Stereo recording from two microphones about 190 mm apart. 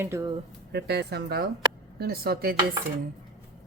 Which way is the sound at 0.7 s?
60° right (ahead or behind).